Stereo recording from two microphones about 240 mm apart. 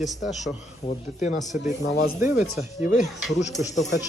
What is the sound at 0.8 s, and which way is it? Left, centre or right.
Speech, left.